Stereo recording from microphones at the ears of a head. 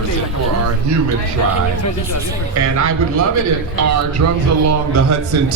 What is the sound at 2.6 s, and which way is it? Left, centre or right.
A man's voice, right.